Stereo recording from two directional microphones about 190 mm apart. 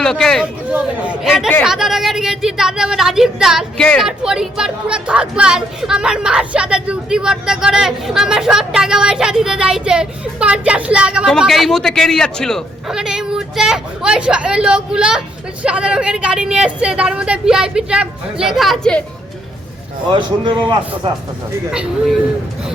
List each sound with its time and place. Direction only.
0.0 s speech: 5° left (ahead or behind)
20.1 s a man's voice: 25° right (ahead or behind)
21.7 s speech: centre (ahead or behind)